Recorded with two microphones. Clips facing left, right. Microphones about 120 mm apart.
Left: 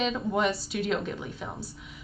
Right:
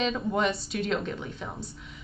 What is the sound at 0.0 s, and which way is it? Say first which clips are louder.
Speech: even; 5° left (ahead or behind).